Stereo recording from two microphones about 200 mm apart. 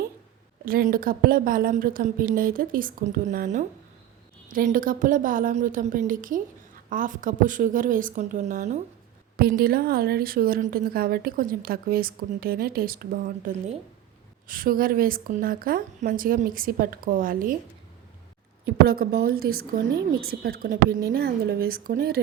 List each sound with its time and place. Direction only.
0.6 s a woman's voice: 45° right (ahead or behind)
9.4 s a woman's voice: 50° right (ahead or behind)
18.6 s a woman's voice: 50° right (ahead or behind)